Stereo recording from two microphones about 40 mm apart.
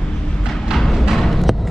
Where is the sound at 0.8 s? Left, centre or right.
Centre.